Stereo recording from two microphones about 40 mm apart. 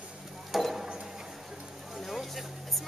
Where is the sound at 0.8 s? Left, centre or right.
Centre.